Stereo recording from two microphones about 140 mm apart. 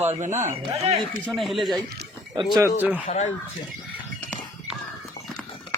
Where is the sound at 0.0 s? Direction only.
55° right (ahead or behind).